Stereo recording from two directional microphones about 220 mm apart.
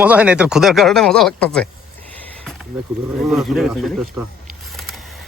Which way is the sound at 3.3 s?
Centre (ahead or behind).